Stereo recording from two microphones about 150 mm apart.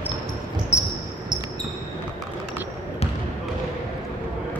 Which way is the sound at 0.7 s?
20° left (ahead or behind).